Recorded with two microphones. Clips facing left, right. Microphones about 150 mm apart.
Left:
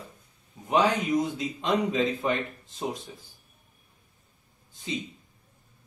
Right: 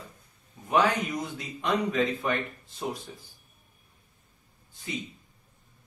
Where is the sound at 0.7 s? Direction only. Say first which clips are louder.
Left 1 dB; 20° left (ahead or behind).